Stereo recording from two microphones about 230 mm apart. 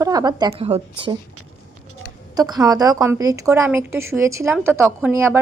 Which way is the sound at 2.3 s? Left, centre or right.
Centre.